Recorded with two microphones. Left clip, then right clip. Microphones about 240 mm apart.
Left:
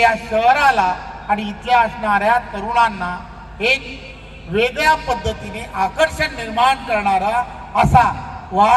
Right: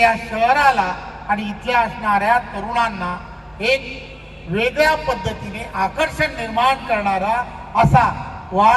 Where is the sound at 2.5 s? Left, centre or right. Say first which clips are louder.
Left 4 dB; right.